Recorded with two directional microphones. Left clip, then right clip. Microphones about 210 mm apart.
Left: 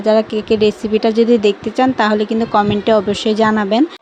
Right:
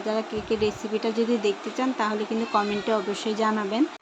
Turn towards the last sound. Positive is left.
turn(degrees=35)  # may be behind; listen again after turning